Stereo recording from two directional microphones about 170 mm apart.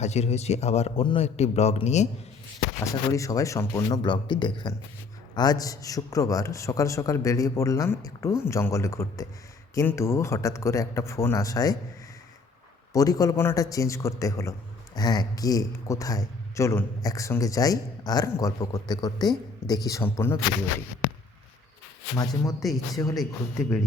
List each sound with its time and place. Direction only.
0.0 s a man's voice: 40° left (ahead or behind)
2.8 s a man's voice: 20° left (ahead or behind)
12.9 s speech: 20° left (ahead or behind)
22.1 s a man's voice: 20° left (ahead or behind)